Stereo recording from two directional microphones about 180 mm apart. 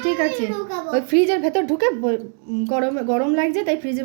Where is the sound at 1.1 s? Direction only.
Centre (ahead or behind).